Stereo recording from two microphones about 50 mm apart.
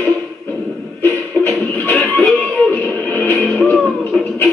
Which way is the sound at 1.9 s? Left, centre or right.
Left.